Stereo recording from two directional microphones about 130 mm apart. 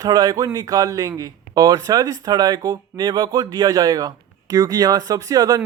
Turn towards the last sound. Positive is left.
turn(degrees=-30)  # may be behind; listen again after turning